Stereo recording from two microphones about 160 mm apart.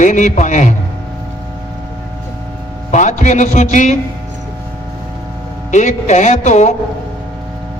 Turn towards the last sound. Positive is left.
turn(degrees=45)  # may be behind; listen again after turning